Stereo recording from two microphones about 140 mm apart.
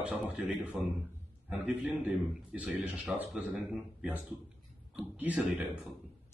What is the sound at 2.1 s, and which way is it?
Speech, 10° right (ahead or behind).